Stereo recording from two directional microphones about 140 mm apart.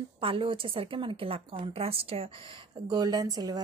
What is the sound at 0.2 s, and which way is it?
A woman's voice, 40° right (ahead or behind).